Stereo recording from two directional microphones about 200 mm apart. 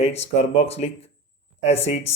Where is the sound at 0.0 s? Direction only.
30° left (ahead or behind).